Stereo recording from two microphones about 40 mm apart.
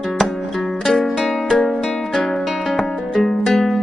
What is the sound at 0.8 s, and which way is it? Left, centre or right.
Music, centre.